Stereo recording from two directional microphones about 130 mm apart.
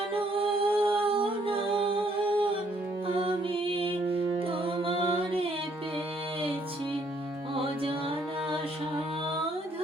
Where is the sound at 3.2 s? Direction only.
45° right (ahead or behind).